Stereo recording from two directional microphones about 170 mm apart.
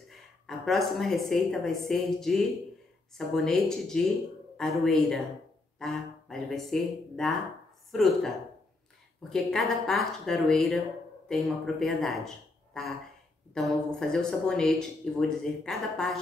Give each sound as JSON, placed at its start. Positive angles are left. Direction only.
{"t": 0.5, "sound": "speech", "side_deg": 0}
{"t": 9.3, "sound": "speech", "side_deg": 0}
{"t": 13.6, "sound": "speech", "side_deg": 0}